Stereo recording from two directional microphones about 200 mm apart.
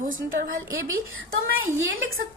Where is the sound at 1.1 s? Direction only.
80° right.